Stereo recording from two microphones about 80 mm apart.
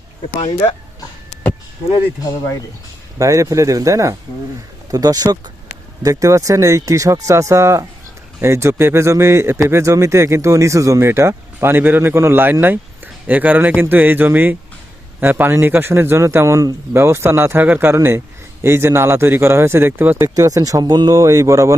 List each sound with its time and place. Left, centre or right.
3.2 s speech: right
20.1 s speech: right
21.2 s speech: right